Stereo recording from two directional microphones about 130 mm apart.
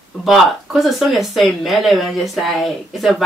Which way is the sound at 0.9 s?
Centre (ahead or behind).